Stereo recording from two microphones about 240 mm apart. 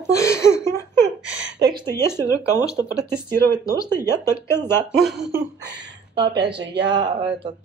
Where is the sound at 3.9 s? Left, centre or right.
Centre.